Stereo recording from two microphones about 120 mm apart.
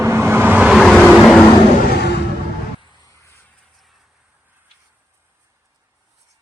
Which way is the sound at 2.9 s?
30° left (ahead or behind).